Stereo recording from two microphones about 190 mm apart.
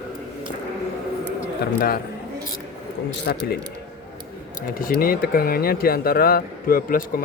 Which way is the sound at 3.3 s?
60° left (ahead or behind).